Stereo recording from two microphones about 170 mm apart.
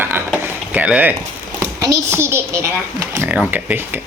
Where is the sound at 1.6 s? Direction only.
15° right (ahead or behind).